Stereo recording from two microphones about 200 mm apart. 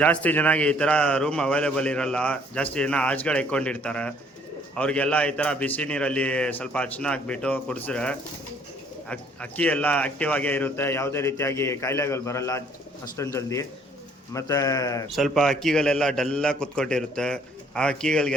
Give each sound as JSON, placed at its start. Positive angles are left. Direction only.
{"t": 0.0, "sound": "a man's voice", "side_deg": 5}
{"t": 15.1, "sound": "a man's voice", "side_deg": 0}